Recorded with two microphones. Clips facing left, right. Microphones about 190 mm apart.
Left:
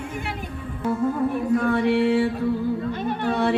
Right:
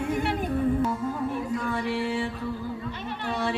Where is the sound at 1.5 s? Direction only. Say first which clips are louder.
Left 8 dB; 60° left (ahead or behind).